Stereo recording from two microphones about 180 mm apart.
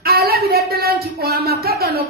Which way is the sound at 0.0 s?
60° right (ahead or behind).